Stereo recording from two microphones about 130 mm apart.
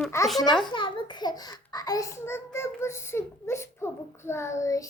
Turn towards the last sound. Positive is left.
turn(degrees=25)  # may be behind; listen again after turning